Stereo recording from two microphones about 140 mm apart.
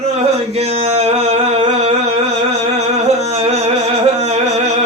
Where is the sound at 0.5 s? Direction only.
50° right (ahead or behind).